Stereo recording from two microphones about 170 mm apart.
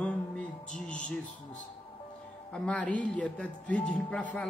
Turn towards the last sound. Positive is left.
turn(degrees=10)  # may be behind; listen again after turning